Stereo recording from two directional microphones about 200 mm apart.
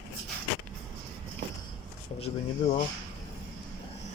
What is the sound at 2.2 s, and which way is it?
Speech, 35° left (ahead or behind).